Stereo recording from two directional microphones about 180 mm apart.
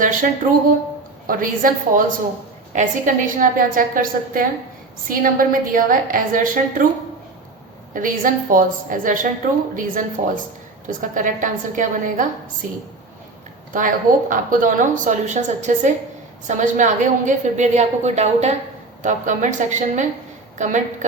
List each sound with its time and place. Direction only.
0.0 s a sound: 45° right (ahead or behind)
1.3 s a woman's voice: 50° right (ahead or behind)
7.9 s a woman's voice: 50° right (ahead or behind)
13.7 s a woman's voice: 45° right (ahead or behind)